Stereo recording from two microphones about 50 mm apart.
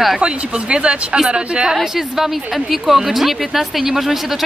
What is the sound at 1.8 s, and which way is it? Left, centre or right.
A woman's voice, centre.